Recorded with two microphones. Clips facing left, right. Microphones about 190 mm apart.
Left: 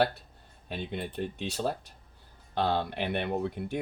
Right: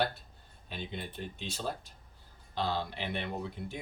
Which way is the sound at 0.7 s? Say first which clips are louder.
Left 5 dB; 65° left (ahead or behind).